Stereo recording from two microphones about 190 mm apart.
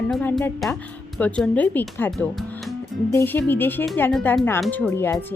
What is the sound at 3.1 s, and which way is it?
A woman's voice, 10° left (ahead or behind).